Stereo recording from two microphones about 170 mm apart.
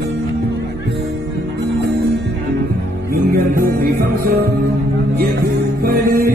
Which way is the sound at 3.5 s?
55° right (ahead or behind).